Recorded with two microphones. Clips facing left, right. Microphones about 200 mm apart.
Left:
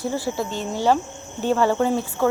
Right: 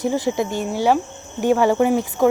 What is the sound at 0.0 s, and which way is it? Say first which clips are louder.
Speech: right 5 dB; 20° right (ahead or behind).